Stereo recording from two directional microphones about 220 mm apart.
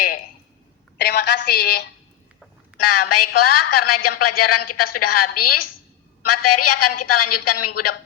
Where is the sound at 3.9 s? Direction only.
90° left.